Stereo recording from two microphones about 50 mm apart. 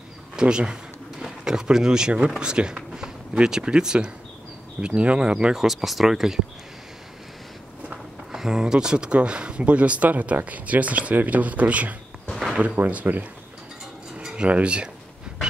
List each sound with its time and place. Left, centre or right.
0.4 s speech: centre
5.6 s speech: centre
7.9 s speech: centre; by 11.9 s right
12.3 s a sound: centre
13.0 s speech: right
14.3 s speech: right